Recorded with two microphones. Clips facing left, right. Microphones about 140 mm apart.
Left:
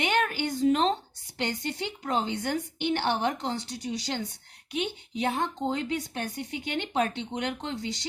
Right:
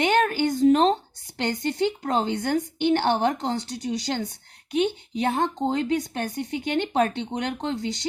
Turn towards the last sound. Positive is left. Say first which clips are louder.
# right 4 dB
turn(degrees=-45)  # may be behind; listen again after turning